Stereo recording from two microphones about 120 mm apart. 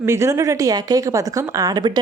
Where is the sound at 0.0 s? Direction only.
20° right (ahead or behind).